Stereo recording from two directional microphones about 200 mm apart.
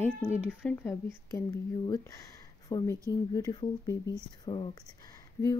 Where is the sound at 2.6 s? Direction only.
15° left (ahead or behind).